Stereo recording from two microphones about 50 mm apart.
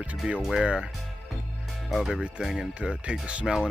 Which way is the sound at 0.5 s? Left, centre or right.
Centre.